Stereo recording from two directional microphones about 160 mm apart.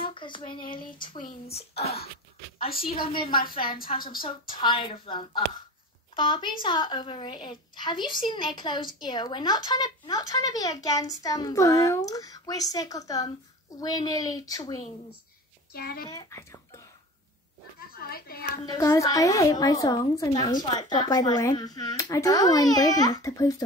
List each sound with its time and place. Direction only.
0.0 s a sound: 30° left (ahead or behind)
0.6 s a woman's voice: 60° left (ahead or behind)
1.5 s speech: 40° left (ahead or behind)
3.1 s speech: 30° left (ahead or behind)
3.3 s a woman's voice: 65° left (ahead or behind)
4.6 s a woman's voice: 30° left (ahead or behind)
15.7 s a child's voice: 70° left (ahead or behind)
16.1 s speech: 20° left (ahead or behind)
17.7 s speech: 70° left (ahead or behind)
18.6 s a woman's voice: 25° left (ahead or behind)